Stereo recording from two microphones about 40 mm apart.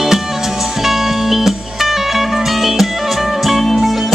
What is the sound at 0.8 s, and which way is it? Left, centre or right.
Music, centre.